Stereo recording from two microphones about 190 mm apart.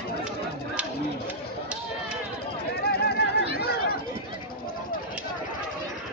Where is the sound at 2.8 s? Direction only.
60° left (ahead or behind).